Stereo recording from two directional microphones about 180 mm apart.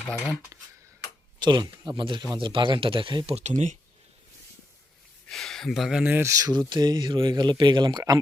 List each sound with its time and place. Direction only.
0.5 s speech: 20° right (ahead or behind); by 3.8 s 40° right (ahead or behind)
5.3 s speech: centre (ahead or behind); by 8.2 s 20° right (ahead or behind)